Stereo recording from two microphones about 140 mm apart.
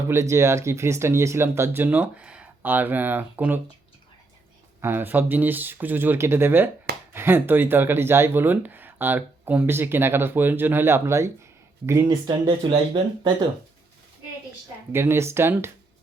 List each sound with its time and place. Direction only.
0.1 s speech: 20° right (ahead or behind)
4.8 s speech: 15° right (ahead or behind)
12.2 s speech: 35° right (ahead or behind)
14.9 s speech: 20° right (ahead or behind)